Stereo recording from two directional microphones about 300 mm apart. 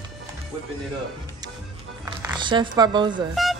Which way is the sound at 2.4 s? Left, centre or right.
Centre.